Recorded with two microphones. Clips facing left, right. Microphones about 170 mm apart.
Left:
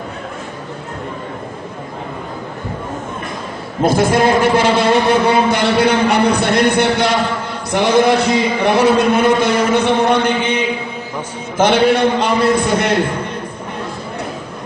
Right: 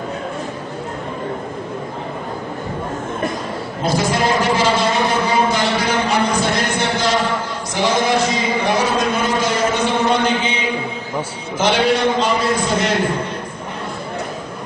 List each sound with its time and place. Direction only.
3.8 s a man's voice: 55° left (ahead or behind)